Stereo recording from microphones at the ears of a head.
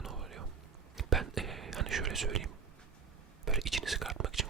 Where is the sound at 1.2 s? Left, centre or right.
Right.